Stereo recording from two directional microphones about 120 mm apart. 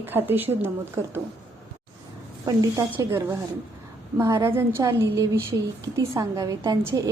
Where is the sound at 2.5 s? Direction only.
30° right (ahead or behind).